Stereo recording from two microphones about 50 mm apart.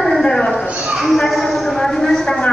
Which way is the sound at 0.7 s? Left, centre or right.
Right.